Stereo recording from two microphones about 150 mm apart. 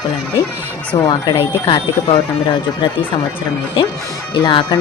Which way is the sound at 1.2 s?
30° left (ahead or behind).